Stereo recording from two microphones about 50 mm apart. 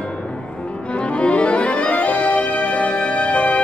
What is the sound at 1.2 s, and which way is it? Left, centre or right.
Music, left.